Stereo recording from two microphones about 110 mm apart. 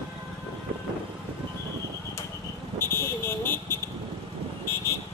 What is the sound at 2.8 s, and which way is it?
Vehicle, 20° left (ahead or behind).